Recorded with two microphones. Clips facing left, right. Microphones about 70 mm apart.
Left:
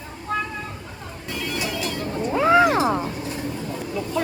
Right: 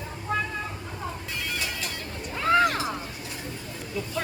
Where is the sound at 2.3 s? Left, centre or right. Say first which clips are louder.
Left 5 dB; centre.